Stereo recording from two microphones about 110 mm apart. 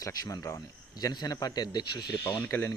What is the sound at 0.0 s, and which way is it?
Speech, 30° left (ahead or behind).